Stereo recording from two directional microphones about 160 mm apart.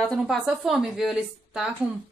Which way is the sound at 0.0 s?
Centre (ahead or behind).